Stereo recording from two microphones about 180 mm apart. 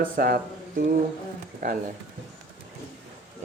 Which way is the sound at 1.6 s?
45° right (ahead or behind).